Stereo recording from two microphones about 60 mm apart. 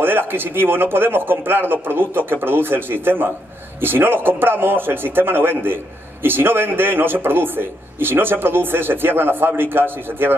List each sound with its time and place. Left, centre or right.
0.0 s a man's voice: right